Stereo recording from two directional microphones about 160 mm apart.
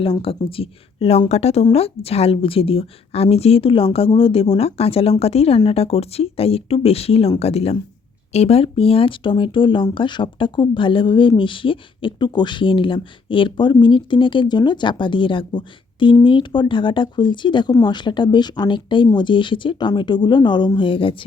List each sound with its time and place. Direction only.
0.0 s speech: 35° left (ahead or behind)